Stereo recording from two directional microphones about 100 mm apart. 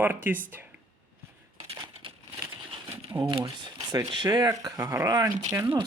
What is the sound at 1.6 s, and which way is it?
Crushing, 60° right (ahead or behind).